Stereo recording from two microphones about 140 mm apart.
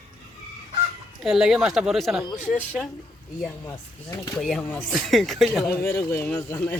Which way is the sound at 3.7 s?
25° left (ahead or behind).